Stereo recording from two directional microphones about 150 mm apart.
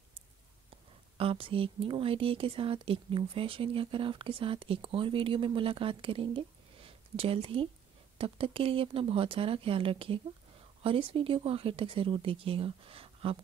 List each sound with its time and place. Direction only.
1.1 s speech: 40° right (ahead or behind)